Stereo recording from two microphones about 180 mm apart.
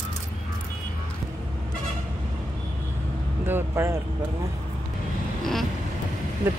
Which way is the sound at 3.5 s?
15° right (ahead or behind).